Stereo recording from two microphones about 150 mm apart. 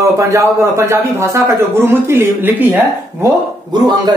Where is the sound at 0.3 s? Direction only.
20° right (ahead or behind).